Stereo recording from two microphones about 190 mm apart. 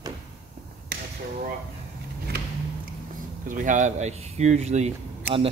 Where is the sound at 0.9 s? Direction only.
55° right (ahead or behind).